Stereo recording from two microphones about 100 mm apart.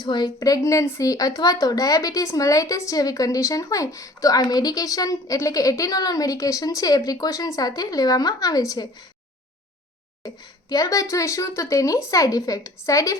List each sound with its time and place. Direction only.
0.0 s a woman's voice: 45° left (ahead or behind)
10.2 s a woman's voice: 40° left (ahead or behind)